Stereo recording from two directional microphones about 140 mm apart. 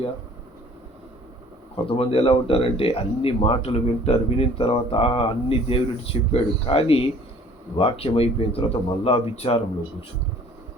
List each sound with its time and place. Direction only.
1.7 s speech: 45° left (ahead or behind)